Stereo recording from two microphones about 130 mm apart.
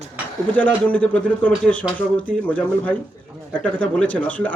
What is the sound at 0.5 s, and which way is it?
Speech, 10° left (ahead or behind).